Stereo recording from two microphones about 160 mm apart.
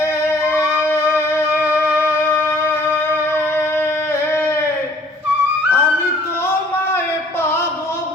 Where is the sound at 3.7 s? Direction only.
15° left (ahead or behind).